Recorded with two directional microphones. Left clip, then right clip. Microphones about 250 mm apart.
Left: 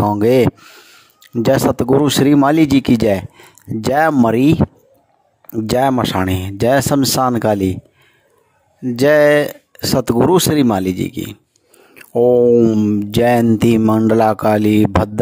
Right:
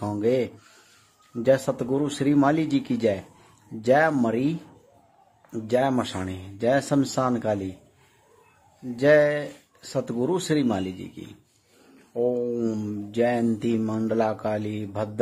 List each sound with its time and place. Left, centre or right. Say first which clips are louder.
0.0 s speech: left 12 dB; left
5.5 s speech: left 8 dB; left
8.9 s speech: left 8 dB; left